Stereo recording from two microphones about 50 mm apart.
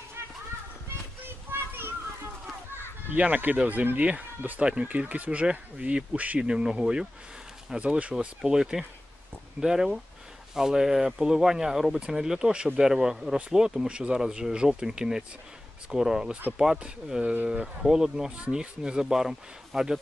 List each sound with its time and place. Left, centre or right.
1.5 s children playing: right
3.1 s speech: right
6.4 s speech: centre
17.2 s speech: right
17.5 s speech: centre